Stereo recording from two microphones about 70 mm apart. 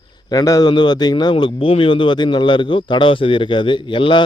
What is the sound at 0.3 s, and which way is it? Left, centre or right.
A man's voice, left.